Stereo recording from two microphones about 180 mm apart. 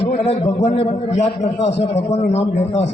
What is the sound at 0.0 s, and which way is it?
A man's voice, 35° left (ahead or behind).